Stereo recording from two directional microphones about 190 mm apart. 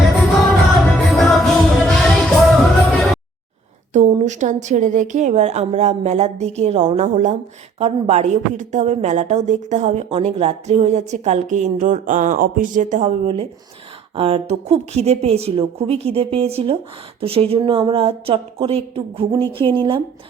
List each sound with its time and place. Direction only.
0.9 s music: centre (ahead or behind)
3.9 s a woman's voice: 40° right (ahead or behind)